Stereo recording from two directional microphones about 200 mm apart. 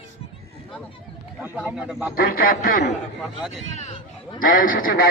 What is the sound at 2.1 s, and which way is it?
Speech, 45° left (ahead or behind).